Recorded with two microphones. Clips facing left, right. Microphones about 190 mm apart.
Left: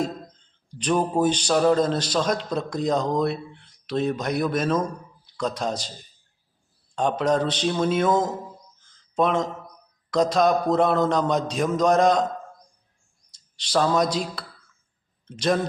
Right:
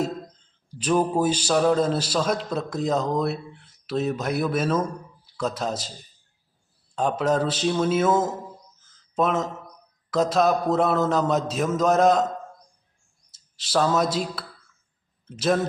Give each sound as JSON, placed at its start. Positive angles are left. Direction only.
{"t": 0.7, "sound": "a man's voice", "side_deg": -5}
{"t": 7.2, "sound": "a man's voice", "side_deg": -5}
{"t": 8.8, "sound": "a sound", "side_deg": -5}
{"t": 10.1, "sound": "a man's voice", "side_deg": -5}
{"t": 13.3, "sound": "a man's voice", "side_deg": -5}